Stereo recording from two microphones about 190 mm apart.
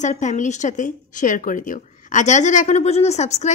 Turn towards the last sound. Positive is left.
turn(degrees=35)  # may be behind; listen again after turning